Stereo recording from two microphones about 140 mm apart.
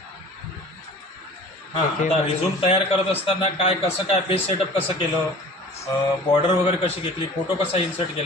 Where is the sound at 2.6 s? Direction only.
45° left (ahead or behind).